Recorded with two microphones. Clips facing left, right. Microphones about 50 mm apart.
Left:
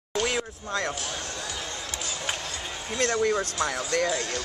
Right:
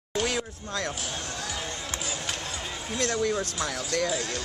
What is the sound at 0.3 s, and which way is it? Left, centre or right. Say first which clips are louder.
Speech: left 2 dB; left.